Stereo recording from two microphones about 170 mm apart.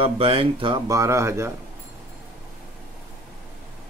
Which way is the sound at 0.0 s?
35° right (ahead or behind).